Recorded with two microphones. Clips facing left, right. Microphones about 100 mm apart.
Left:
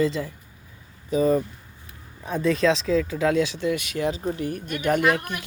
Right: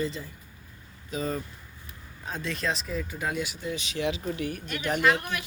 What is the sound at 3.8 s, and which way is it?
Speech, 45° left (ahead or behind).